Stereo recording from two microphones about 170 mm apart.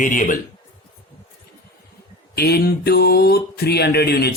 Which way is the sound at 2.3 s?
70° left (ahead or behind).